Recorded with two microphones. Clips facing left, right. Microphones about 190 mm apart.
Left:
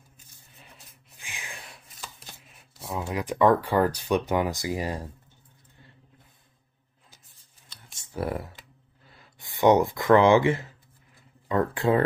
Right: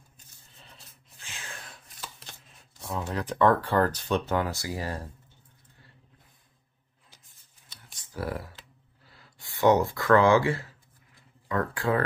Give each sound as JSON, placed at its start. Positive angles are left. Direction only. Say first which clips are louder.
{"t": 1.1, "sound": "a sound", "louder": "left 1 dB", "side_deg": 15}
{"t": 2.0, "sound": "speech", "louder": "even", "side_deg": 5}
{"t": 7.9, "sound": "computer keyboard", "louder": "left 3 dB", "side_deg": 25}
{"t": 9.4, "sound": "speech", "louder": "left 2 dB", "side_deg": 20}